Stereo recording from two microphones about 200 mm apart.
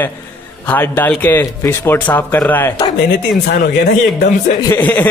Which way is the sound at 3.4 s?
50° left (ahead or behind).